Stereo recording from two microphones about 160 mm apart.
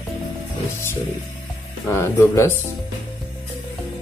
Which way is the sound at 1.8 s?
15° left (ahead or behind).